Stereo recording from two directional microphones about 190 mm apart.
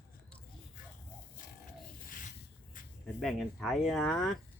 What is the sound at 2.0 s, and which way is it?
Rub, 45° left (ahead or behind).